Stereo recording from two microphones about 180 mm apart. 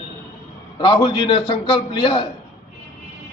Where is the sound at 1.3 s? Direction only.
30° left (ahead or behind).